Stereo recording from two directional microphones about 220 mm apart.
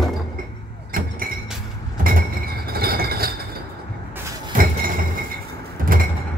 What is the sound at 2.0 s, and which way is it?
Chink, 40° right (ahead or behind).